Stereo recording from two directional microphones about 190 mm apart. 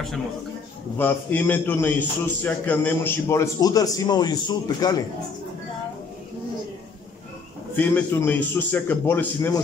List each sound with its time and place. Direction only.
0.9 s a man's voice: 10° left (ahead or behind)
7.7 s a man's voice: 10° left (ahead or behind)